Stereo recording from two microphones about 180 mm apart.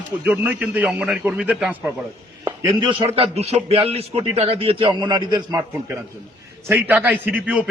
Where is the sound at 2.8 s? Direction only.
35° right (ahead or behind).